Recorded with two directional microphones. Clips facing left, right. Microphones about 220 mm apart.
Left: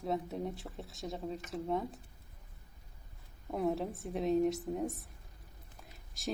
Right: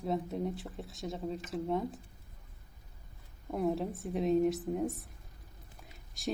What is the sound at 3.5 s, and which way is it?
Speech, centre (ahead or behind).